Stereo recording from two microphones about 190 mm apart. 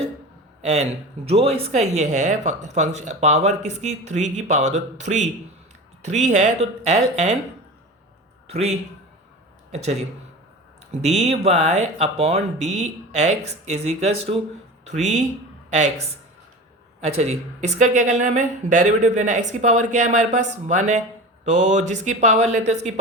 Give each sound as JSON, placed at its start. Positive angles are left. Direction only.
{"t": 0.6, "sound": "speech", "side_deg": -35}
{"t": 8.4, "sound": "speech", "side_deg": -35}